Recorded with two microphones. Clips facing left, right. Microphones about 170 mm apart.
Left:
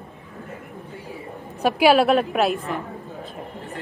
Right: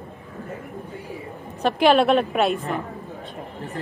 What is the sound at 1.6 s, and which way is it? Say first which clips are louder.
A woman's voice: left 1 dB; 5° left (ahead or behind).